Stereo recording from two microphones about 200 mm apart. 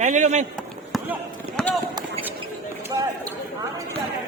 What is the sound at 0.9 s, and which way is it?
Run, centre (ahead or behind).